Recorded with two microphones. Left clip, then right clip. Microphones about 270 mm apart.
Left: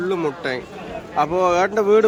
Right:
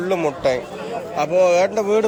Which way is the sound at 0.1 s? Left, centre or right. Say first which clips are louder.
Right 4 dB; centre.